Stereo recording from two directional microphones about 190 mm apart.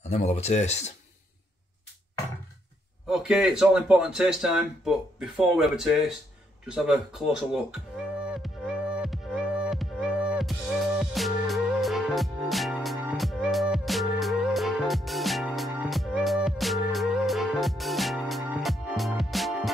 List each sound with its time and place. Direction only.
0.0 s speech: 35° left (ahead or behind)
3.1 s speech: 5° right (ahead or behind)
8.9 s music: 5° right (ahead or behind)